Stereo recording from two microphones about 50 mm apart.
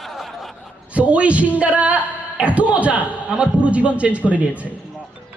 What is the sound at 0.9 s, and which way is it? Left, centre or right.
A man's voice, right.